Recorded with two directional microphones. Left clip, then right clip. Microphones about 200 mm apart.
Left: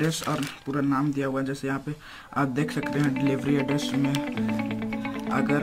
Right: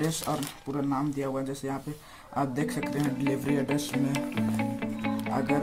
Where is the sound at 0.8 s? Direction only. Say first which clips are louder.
Left 4 dB; 20° left (ahead or behind).